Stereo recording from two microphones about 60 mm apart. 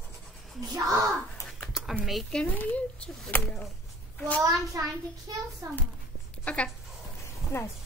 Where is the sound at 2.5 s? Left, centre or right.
Left.